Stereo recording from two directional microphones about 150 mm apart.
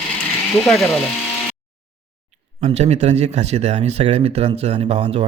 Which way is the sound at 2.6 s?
45° right (ahead or behind).